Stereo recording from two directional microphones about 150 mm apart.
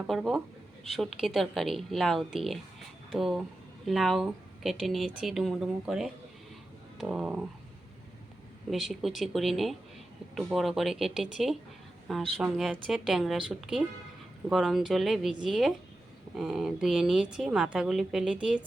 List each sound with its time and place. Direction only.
0.1 s a woman's voice: centre (ahead or behind)
8.7 s a woman's voice: centre (ahead or behind)